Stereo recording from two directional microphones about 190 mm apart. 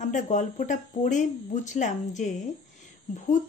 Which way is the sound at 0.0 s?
40° left (ahead or behind).